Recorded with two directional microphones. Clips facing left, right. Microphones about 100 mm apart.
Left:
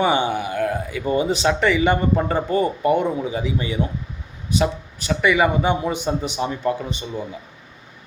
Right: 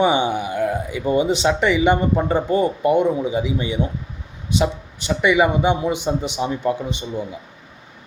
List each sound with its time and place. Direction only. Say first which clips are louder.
0.0 s speech: right 1 dB; 20° right (ahead or behind)